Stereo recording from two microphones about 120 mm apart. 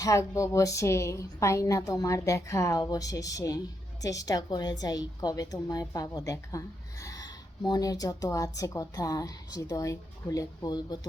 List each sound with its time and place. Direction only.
0.0 s a woman's voice: 25° left (ahead or behind)